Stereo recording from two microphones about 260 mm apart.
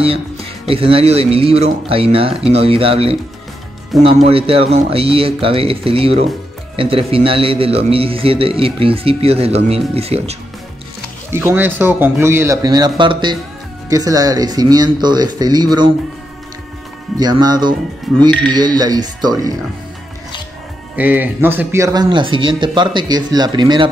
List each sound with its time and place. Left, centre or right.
0.7 s a man's voice: right
11.2 s speech: centre
17.2 s speech: centre
18.1 s speech: centre
18.5 s speech: centre
20.9 s speech: centre